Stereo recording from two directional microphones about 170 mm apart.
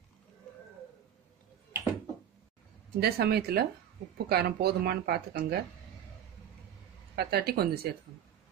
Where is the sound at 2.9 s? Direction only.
65° right (ahead or behind).